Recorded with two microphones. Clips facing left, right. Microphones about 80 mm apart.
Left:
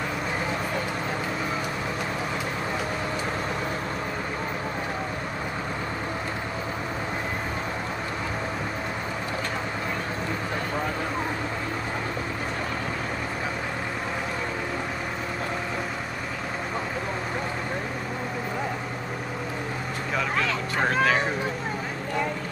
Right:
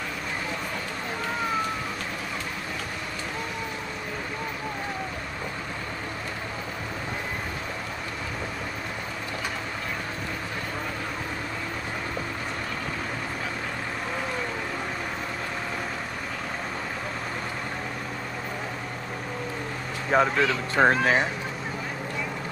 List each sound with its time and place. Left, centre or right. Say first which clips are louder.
20.1 s speech: right 5 dB; right